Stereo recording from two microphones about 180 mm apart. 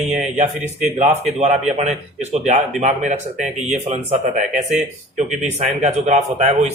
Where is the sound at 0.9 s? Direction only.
40° right (ahead or behind).